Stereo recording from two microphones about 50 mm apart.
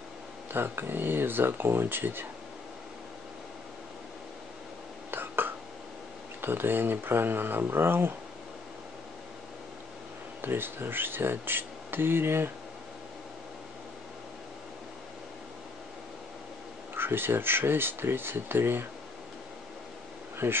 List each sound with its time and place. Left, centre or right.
0.5 s speech: right
5.1 s a sound: right
6.4 s speech: right
10.4 s speech: right
16.9 s speech: right
20.4 s speech: right